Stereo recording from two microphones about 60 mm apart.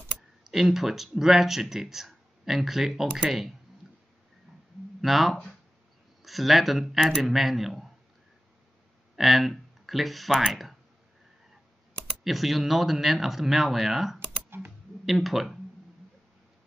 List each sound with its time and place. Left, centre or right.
0.4 s speech: centre
5.0 s speech: centre
9.1 s speech: centre
12.3 s speech: centre